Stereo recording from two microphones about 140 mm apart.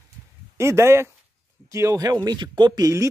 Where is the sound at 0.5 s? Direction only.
20° right (ahead or behind).